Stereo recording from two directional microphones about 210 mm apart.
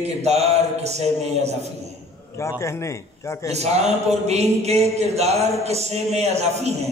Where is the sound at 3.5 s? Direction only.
30° right (ahead or behind).